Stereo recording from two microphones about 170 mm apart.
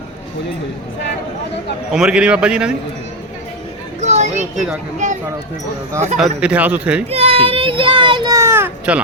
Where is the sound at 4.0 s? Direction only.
40° right (ahead or behind).